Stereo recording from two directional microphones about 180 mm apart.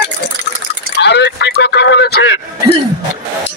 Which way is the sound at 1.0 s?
70° left (ahead or behind).